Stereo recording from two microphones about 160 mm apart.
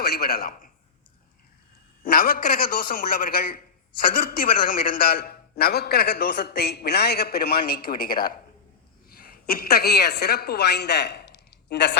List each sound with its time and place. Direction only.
0.0 s a man's voice: 75° left (ahead or behind)
2.0 s a man's voice: 65° left (ahead or behind); by 11.9 s 90° left